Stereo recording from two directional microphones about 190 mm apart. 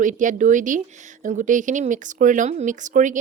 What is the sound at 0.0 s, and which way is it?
Speech, 40° right (ahead or behind).